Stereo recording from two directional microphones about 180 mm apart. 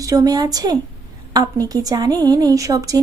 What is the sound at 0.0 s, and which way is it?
A woman's voice, 20° right (ahead or behind).